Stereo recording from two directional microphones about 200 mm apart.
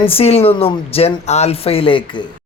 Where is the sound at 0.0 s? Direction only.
30° left (ahead or behind).